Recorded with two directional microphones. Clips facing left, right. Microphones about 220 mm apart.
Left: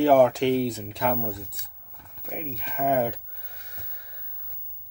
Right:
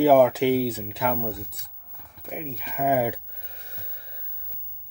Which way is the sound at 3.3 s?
25° right (ahead or behind).